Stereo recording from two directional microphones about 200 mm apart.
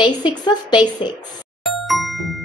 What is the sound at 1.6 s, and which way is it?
Music, centre (ahead or behind).